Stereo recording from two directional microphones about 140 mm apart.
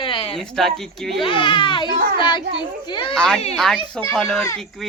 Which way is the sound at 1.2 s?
40° left (ahead or behind).